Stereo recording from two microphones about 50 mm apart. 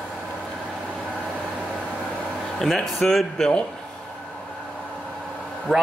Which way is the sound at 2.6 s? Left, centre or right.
Centre.